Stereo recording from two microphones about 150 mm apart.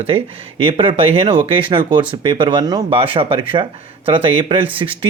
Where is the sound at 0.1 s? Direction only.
35° right (ahead or behind).